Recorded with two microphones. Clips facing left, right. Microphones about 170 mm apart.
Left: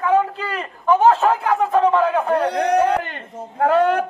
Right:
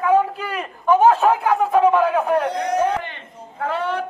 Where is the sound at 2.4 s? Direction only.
65° left (ahead or behind).